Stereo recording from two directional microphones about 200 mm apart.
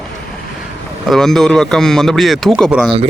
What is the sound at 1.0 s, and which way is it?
Speech, centre (ahead or behind).